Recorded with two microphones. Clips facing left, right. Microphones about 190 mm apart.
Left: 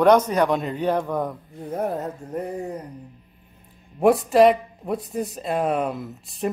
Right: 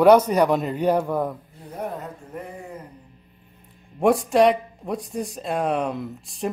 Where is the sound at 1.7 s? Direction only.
45° left (ahead or behind).